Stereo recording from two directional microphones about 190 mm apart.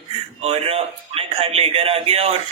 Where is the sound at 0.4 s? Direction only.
30° right (ahead or behind).